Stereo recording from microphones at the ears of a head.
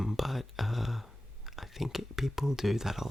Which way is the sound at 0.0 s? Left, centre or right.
Centre.